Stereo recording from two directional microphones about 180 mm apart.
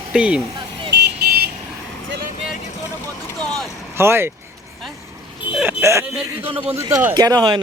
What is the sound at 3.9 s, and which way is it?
Speech, 15° right (ahead or behind).